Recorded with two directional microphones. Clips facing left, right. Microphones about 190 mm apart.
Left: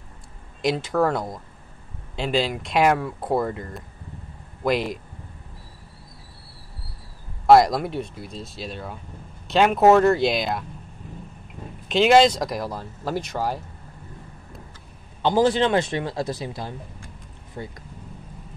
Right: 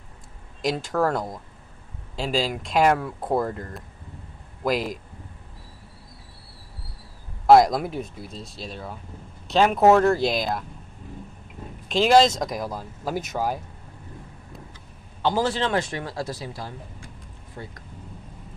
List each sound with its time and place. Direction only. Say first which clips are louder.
0.7 s speech: left 2 dB; centre (ahead or behind)
7.4 s speech: even; centre (ahead or behind)
11.9 s speech: left 2 dB; centre (ahead or behind)
15.2 s speech: left 4 dB; 15° left (ahead or behind)